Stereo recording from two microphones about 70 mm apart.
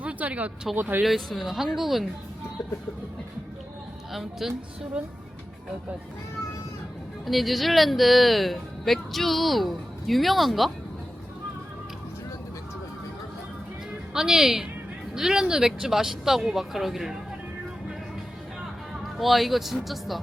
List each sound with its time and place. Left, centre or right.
0.0 s a sound: centre
0.8 s speech: right
1.0 s speech: centre
4.1 s speech: centre
7.3 s speech: centre
14.1 s speech: centre
19.2 s speech: centre